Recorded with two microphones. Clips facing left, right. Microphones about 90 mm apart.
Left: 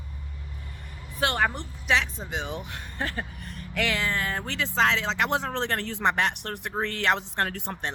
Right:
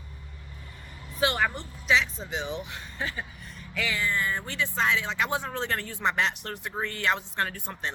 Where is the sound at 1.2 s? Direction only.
50° left (ahead or behind); by 4.4 s 75° left (ahead or behind).